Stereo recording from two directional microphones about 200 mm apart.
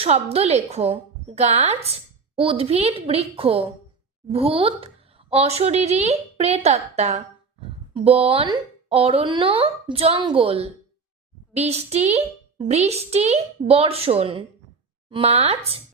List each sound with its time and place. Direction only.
0.0 s speech: 30° right (ahead or behind)